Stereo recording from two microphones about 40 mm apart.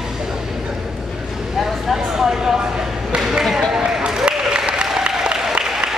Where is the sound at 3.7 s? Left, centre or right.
Centre.